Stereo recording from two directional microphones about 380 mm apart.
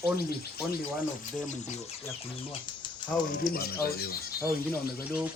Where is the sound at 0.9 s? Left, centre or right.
Centre.